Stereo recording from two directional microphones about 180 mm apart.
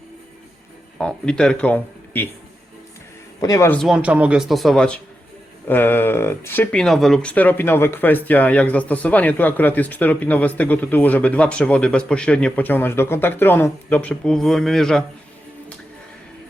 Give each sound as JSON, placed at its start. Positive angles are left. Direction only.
{"t": 0.9, "sound": "speech", "side_deg": 5}
{"t": 3.4, "sound": "speech", "side_deg": 15}
{"t": 3.8, "sound": "speech", "side_deg": 0}